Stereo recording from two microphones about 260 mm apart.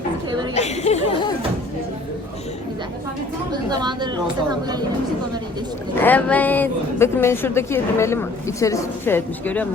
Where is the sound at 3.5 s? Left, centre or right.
Centre.